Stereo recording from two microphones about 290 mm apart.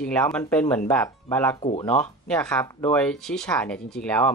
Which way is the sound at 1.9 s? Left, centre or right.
Centre.